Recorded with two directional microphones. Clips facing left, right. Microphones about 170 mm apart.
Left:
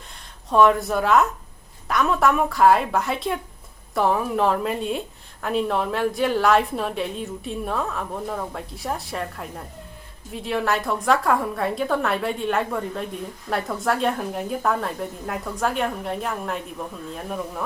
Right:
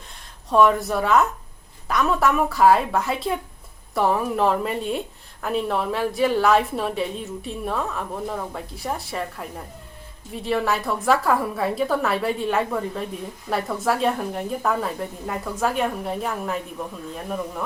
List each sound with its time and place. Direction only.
0.5 s a woman's voice: centre (ahead or behind)